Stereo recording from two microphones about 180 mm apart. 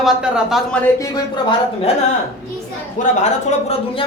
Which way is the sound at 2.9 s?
40° left (ahead or behind).